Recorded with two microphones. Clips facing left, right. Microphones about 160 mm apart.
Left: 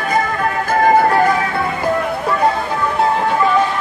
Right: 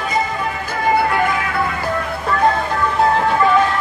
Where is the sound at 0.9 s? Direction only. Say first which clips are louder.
Left 2 dB; 40° left (ahead or behind).